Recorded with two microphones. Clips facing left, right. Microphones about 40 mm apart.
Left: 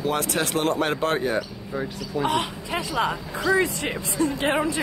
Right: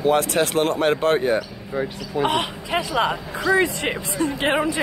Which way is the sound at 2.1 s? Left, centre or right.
Right.